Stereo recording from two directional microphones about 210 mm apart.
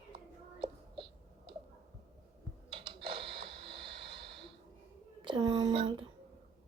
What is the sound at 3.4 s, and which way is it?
Vehicle, 25° right (ahead or behind).